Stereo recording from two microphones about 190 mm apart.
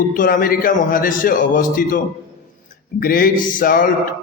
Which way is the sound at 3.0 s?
50° left (ahead or behind).